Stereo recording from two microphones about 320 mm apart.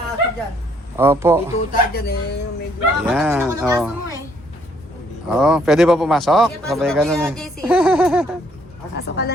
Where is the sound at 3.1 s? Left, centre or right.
Centre.